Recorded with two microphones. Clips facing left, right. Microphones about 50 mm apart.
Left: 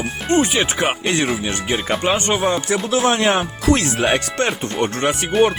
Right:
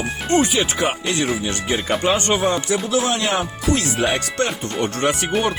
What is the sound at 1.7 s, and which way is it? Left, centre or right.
Speech, centre.